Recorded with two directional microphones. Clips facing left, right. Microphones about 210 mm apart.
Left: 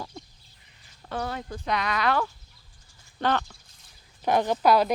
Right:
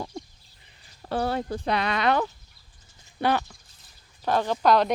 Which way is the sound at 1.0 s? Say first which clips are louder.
Right 6 dB; 30° right (ahead or behind).